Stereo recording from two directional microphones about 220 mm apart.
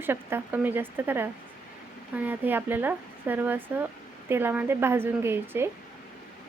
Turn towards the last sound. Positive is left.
turn(degrees=-10)  # may be behind; listen again after turning